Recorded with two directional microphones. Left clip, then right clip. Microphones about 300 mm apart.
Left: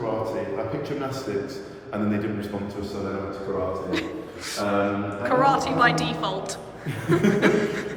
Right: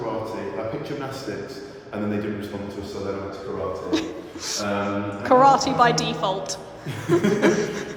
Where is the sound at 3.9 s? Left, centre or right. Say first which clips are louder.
Right 2 dB; centre.